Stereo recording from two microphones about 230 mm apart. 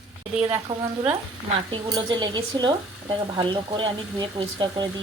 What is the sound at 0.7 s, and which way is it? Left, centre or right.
Speech, centre.